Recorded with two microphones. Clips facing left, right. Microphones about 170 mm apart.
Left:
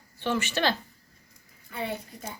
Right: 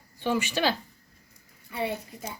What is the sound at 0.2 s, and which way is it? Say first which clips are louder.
Speech: right 1 dB; 10° right (ahead or behind).